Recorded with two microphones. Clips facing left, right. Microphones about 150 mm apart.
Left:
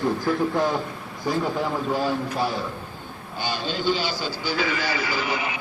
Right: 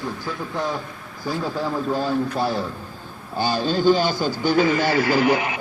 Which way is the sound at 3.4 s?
40° right (ahead or behind).